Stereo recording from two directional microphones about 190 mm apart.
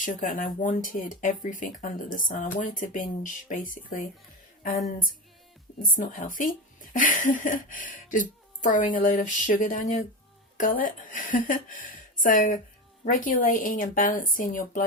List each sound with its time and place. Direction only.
0.0 s a woman's voice: 45° left (ahead or behind)
5.8 s a woman's voice: 45° left (ahead or behind)